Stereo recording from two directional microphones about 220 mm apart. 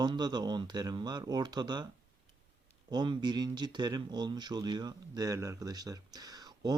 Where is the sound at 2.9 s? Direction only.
20° right (ahead or behind).